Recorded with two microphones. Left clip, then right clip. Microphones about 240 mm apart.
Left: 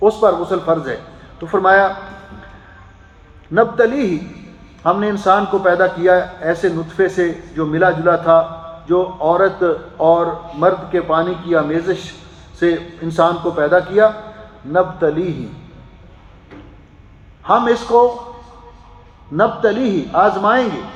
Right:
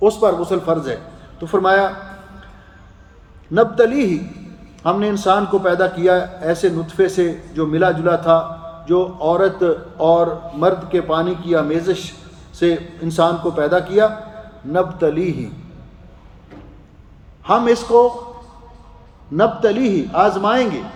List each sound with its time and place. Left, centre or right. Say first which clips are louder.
0.2 s a man's voice: left 2 dB; right
3.5 s a man's voice: even; right
17.4 s a man's voice: left 1 dB; right
19.4 s a man's voice: left 1 dB; right